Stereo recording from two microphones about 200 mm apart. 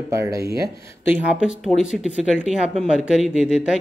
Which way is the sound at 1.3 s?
5° right (ahead or behind).